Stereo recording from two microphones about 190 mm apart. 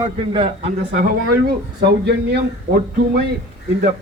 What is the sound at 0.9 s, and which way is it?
Speech, 45° right (ahead or behind).